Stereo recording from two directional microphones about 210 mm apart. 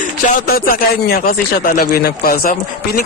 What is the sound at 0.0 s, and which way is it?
Speech, 45° left (ahead or behind).